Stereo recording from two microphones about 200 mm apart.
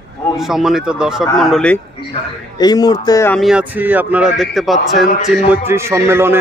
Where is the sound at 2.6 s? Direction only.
20° left (ahead or behind).